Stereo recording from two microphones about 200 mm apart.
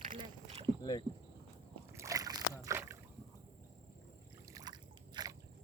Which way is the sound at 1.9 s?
15° right (ahead or behind).